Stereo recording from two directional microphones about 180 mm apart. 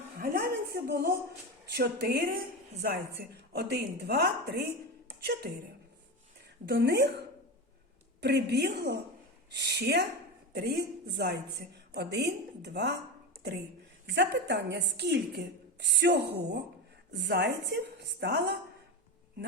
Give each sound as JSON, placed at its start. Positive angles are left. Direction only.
{"t": 0.2, "sound": "a sound", "side_deg": -55}
{"t": 1.7, "sound": "a woman's voice", "side_deg": -60}
{"t": 6.7, "sound": "a woman's voice", "side_deg": -65}
{"t": 8.2, "sound": "a woman's voice", "side_deg": -65}
{"t": 14.1, "sound": "a woman's voice", "side_deg": -75}